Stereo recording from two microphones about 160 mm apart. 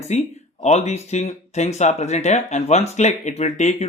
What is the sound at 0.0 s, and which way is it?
Speech, 45° left (ahead or behind).